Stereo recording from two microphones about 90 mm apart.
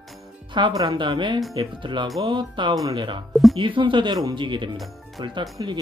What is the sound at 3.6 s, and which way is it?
Speech, 70° right (ahead or behind).